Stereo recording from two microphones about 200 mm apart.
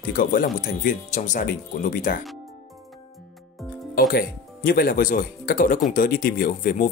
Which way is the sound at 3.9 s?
45° left (ahead or behind).